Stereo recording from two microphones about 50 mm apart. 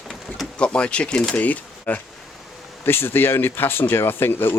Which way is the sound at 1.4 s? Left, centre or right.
Left.